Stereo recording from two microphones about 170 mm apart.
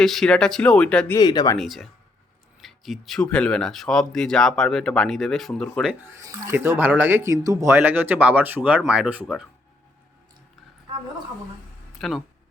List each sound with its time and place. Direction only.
0.0 s speech: centre (ahead or behind)
1.1 s speech: 25° left (ahead or behind)
1.5 s speech: centre (ahead or behind)
5.9 s speech: 15° right (ahead or behind)
11.9 s speech: centre (ahead or behind)